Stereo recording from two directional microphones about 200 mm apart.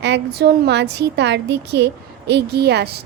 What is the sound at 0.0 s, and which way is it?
A woman's voice, 55° right (ahead or behind).